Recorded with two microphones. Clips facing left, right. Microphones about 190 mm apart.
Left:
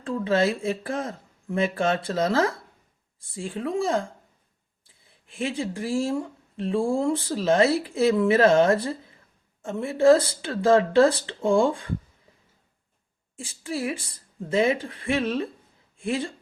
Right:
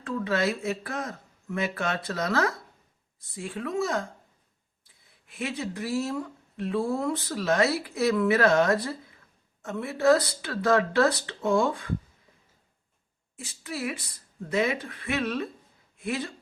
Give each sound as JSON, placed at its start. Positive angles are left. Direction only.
{"t": 0.0, "sound": "speech", "side_deg": 30}
{"t": 5.3, "sound": "speech", "side_deg": 30}
{"t": 13.3, "sound": "speech", "side_deg": 30}